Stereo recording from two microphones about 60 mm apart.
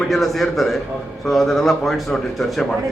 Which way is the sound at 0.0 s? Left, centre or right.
Centre.